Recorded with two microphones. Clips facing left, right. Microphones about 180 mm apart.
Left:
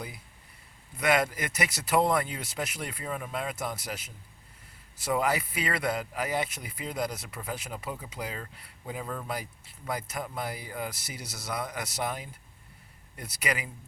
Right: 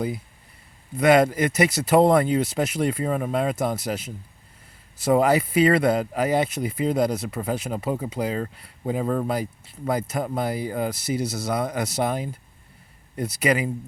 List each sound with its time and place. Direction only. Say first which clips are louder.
0.9 s speech: right 9 dB; 30° right (ahead or behind)
9.0 s speech: right 13 dB; 45° right (ahead or behind)
9.3 s speech: right 9 dB; 30° right (ahead or behind)